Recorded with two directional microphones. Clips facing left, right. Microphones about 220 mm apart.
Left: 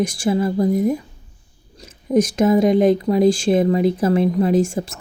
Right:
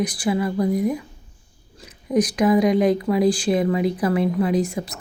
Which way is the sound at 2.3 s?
25° left (ahead or behind).